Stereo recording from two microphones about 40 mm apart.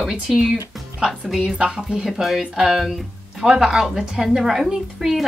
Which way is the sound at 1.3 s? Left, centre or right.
Centre.